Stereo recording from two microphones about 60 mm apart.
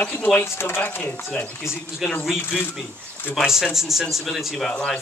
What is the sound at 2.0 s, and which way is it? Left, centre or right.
Speech, centre.